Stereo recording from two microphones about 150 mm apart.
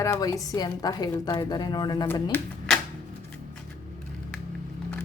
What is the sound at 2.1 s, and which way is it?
Speech, 10° left (ahead or behind).